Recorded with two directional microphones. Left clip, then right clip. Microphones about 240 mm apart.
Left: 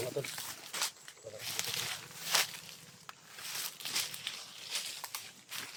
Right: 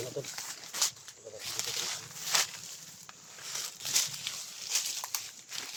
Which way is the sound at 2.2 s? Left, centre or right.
Centre.